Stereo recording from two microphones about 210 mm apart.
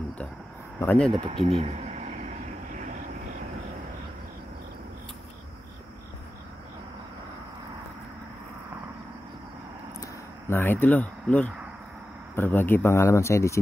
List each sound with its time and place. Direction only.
0.7 s speech: 5° left (ahead or behind)
1.1 s speech: 25° right (ahead or behind)
10.5 s speech: 10° left (ahead or behind)